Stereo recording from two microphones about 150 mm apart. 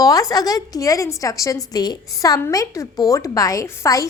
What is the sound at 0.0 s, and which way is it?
A woman's voice, 25° left (ahead or behind).